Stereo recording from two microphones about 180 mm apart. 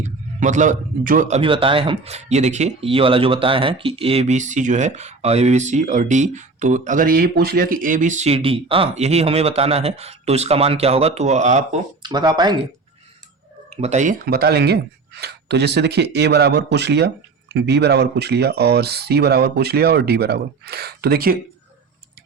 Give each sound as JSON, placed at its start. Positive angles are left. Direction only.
{"t": 0.0, "sound": "a man's voice", "side_deg": -45}
{"t": 1.4, "sound": "speech", "side_deg": -30}
{"t": 12.0, "sound": "speech", "side_deg": -25}
{"t": 13.7, "sound": "speech", "side_deg": -40}